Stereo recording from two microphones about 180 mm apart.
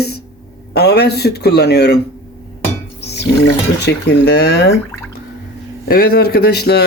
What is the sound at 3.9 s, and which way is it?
Speech, 65° left (ahead or behind).